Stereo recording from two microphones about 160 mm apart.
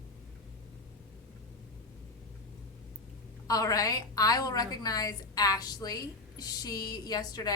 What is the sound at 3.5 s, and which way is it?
A woman's voice, 20° left (ahead or behind).